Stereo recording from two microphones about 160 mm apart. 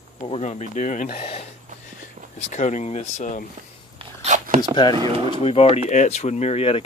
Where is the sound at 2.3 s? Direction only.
45° left (ahead or behind).